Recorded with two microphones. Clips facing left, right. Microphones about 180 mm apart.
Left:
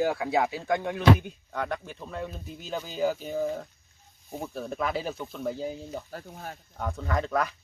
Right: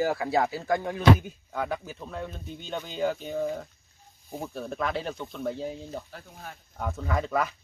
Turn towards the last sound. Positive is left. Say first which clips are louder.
# even
turn(degrees=0)  # may be behind; listen again after turning